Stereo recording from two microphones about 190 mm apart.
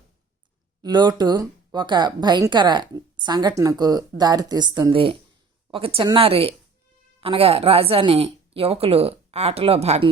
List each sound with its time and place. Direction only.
0.8 s speech: 20° right (ahead or behind)